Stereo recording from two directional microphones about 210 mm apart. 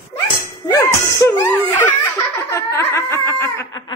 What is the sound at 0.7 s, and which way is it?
Laughter, 15° left (ahead or behind).